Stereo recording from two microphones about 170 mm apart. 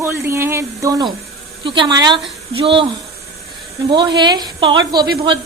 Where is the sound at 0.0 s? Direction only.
15° right (ahead or behind); by 2.8 s 30° right (ahead or behind).